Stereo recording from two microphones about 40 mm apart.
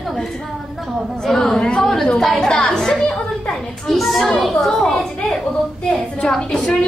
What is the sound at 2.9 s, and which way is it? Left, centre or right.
Speech, left.